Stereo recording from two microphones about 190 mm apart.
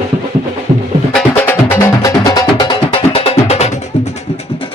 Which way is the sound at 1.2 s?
10° left (ahead or behind).